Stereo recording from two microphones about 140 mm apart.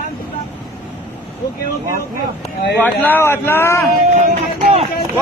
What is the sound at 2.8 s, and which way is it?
Speech, 15° left (ahead or behind).